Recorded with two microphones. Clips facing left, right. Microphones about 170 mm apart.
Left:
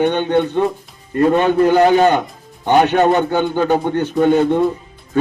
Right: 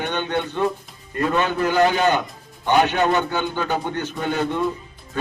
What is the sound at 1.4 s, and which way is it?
A man's voice, 40° left (ahead or behind).